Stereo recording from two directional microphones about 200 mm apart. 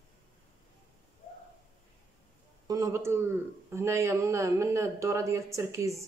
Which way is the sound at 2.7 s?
15° right (ahead or behind).